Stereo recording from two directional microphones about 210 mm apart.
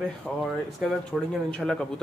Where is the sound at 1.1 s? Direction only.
5° right (ahead or behind).